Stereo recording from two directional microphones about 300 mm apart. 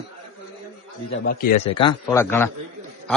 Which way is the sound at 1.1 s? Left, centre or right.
Left.